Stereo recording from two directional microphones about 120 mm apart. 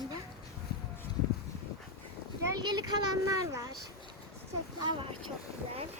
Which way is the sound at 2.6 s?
35° right (ahead or behind).